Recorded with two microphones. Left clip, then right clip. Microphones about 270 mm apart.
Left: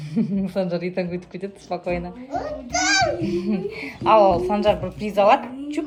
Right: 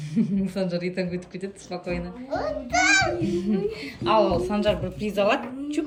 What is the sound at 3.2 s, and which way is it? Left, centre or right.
Speech, left.